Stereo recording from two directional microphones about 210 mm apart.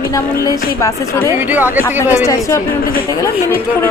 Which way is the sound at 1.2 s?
10° right (ahead or behind).